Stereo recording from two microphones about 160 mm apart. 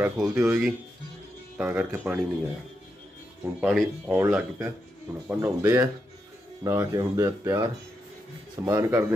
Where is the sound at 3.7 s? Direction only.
Centre (ahead or behind).